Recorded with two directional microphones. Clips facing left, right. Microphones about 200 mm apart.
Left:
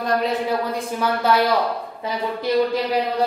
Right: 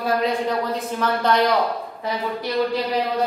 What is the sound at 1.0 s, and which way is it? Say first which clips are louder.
Speech: even; 5° left (ahead or behind).